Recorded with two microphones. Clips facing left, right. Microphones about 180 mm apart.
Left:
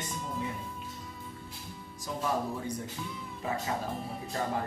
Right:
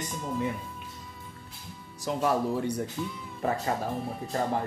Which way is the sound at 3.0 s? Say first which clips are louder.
Right 6 dB; centre (ahead or behind).